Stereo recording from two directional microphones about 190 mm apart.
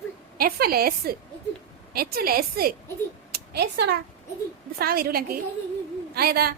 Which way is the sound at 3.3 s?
55° right (ahead or behind).